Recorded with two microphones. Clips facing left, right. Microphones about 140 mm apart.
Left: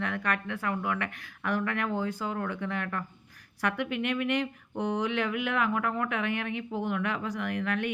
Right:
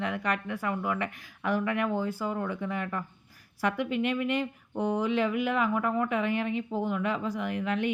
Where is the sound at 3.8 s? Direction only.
65° left (ahead or behind).